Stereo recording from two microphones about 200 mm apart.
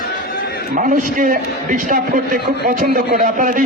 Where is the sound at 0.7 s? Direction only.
40° right (ahead or behind).